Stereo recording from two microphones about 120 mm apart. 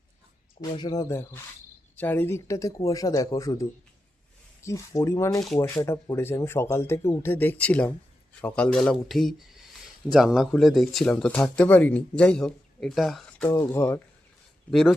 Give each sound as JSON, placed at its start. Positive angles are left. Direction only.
{"t": 0.8, "sound": "speech", "side_deg": 35}
{"t": 2.0, "sound": "speech", "side_deg": 15}
{"t": 13.4, "sound": "speech", "side_deg": 25}
{"t": 14.7, "sound": "speech", "side_deg": 0}